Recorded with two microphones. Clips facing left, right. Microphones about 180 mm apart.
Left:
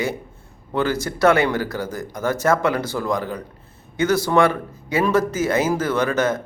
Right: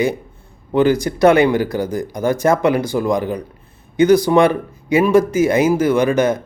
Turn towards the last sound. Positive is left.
turn(degrees=-15)  # may be behind; listen again after turning